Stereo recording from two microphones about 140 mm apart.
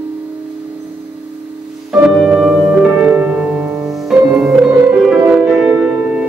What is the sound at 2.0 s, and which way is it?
Music, 5° right (ahead or behind).